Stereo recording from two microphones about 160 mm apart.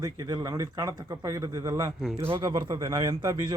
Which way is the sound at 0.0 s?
25° right (ahead or behind).